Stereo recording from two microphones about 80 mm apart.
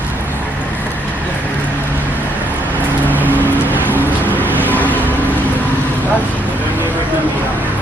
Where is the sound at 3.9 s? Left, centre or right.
Right.